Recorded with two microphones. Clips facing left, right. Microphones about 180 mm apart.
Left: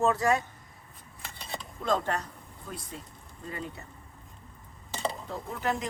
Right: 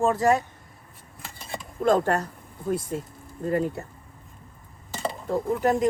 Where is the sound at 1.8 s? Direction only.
45° right (ahead or behind).